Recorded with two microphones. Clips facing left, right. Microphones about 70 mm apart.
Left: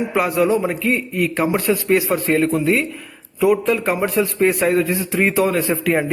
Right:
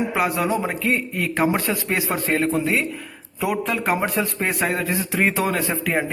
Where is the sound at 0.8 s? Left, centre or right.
Right.